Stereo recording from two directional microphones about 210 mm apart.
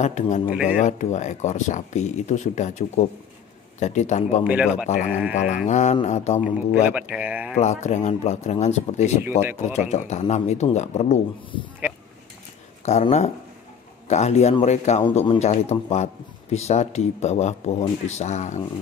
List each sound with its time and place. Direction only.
0.0 s speech: 35° left (ahead or behind)
4.5 s speech: 5° right (ahead or behind)
5.3 s speech: 35° left (ahead or behind)
6.7 s speech: 5° right (ahead or behind)
7.5 s speech: 35° left (ahead or behind)
9.2 s speech: 10° right (ahead or behind)
9.6 s speech: 35° left (ahead or behind)
12.8 s speech: 30° left (ahead or behind)